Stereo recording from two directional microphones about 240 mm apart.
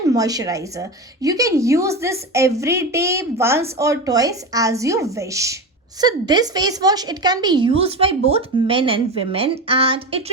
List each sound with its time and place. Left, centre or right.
0.1 s a woman's voice: centre